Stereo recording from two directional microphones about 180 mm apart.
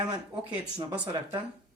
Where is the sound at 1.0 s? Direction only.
20° right (ahead or behind).